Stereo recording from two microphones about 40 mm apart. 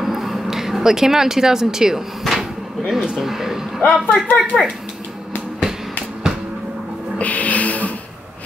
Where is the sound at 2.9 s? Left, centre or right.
Centre.